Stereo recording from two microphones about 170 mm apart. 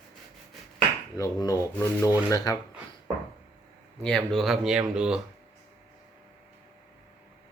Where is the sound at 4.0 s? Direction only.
5° left (ahead or behind).